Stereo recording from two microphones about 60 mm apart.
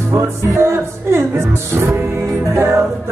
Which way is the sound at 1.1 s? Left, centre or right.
Right.